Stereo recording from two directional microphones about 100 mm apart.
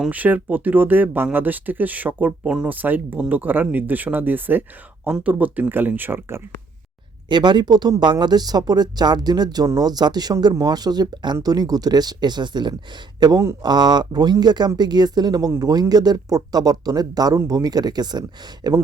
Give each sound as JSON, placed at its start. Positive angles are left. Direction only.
{"t": 0.1, "sound": "speech", "side_deg": -15}
{"t": 7.3, "sound": "speech", "side_deg": -50}